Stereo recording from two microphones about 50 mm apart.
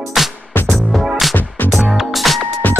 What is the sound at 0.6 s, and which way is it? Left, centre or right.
Music, centre.